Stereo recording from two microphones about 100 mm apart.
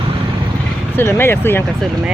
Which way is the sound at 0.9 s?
25° left (ahead or behind).